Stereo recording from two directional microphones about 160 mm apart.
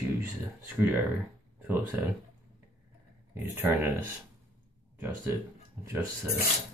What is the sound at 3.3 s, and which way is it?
Speech, 15° right (ahead or behind).